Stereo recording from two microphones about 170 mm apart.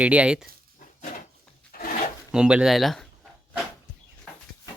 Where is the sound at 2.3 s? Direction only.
5° right (ahead or behind).